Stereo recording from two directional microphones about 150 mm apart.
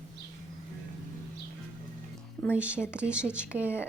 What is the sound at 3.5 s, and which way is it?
Speech, 15° left (ahead or behind).